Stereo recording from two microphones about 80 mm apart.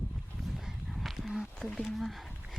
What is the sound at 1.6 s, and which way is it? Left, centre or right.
Speech, centre.